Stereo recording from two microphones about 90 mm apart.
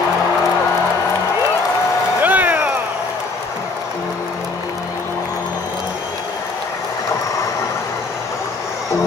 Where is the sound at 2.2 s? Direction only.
20° right (ahead or behind).